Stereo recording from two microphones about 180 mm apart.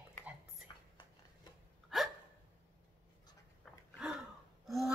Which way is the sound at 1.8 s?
Centre (ahead or behind).